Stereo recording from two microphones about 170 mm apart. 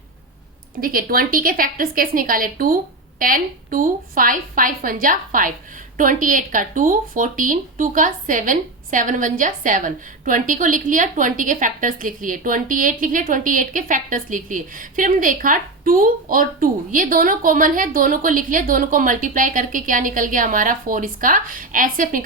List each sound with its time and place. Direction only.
0.8 s a woman's voice: 55° right (ahead or behind)